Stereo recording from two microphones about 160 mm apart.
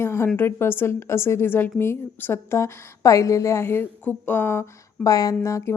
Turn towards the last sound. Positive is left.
turn(degrees=20)  # may be behind; listen again after turning